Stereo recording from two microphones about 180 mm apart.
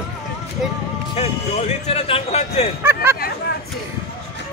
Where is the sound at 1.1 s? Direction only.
35° left (ahead or behind).